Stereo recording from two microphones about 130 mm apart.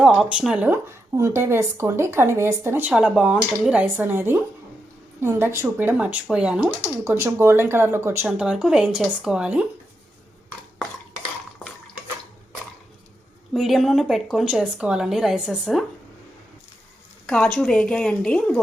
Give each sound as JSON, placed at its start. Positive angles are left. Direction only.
{"t": 0.0, "sound": "speech", "side_deg": -5}
{"t": 0.7, "sound": "speech", "side_deg": -20}
{"t": 2.9, "sound": "speech", "side_deg": -5}
{"t": 7.0, "sound": "speech", "side_deg": -20}
{"t": 8.4, "sound": "speech", "side_deg": -5}
{"t": 13.5, "sound": "speech", "side_deg": 0}
{"t": 17.2, "sound": "a woman's voice", "side_deg": 10}